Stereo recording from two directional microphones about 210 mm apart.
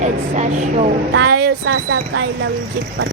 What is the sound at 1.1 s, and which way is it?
A woman's voice, 50° right (ahead or behind).